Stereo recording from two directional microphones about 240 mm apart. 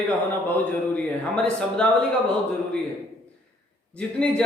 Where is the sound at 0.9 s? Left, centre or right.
Centre.